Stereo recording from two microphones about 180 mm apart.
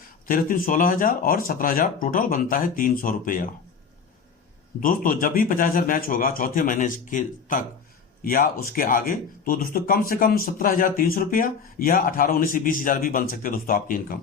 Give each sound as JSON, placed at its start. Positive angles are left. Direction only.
{"t": 0.3, "sound": "speech", "side_deg": 50}
{"t": 4.8, "sound": "speech", "side_deg": 50}